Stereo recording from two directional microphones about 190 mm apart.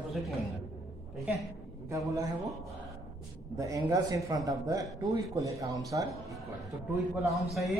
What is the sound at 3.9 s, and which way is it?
Speech, 20° right (ahead or behind).